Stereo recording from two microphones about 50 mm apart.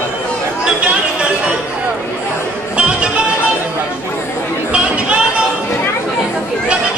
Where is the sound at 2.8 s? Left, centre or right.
Right.